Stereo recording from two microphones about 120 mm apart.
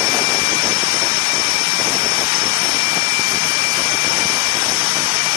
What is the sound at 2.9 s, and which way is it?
Jet engine, 65° right (ahead or behind).